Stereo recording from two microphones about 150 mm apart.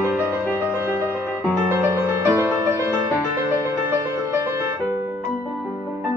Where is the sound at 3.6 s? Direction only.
20° right (ahead or behind).